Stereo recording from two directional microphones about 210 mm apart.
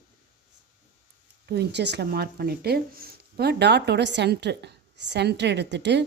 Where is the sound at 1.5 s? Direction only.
50° right (ahead or behind).